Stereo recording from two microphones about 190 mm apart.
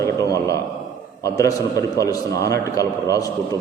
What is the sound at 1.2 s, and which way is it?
A man's voice, 15° left (ahead or behind).